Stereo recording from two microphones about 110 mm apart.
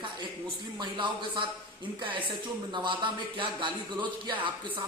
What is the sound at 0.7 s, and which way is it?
Speech, 50° right (ahead or behind).